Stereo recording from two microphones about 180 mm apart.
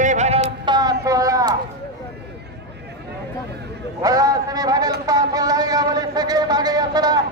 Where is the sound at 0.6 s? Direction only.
25° right (ahead or behind).